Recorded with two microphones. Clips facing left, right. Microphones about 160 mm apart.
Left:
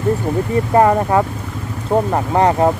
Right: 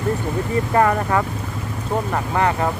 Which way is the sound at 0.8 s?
20° left (ahead or behind).